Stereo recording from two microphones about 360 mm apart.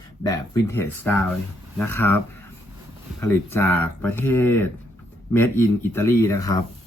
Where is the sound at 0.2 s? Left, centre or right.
Centre.